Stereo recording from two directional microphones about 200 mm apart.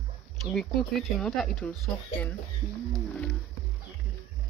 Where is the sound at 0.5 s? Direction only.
Centre (ahead or behind).